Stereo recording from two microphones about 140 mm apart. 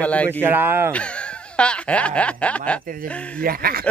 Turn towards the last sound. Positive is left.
turn(degrees=-90)